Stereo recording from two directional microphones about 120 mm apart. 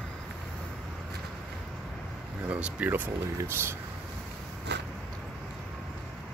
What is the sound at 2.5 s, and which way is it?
Speech, 10° right (ahead or behind).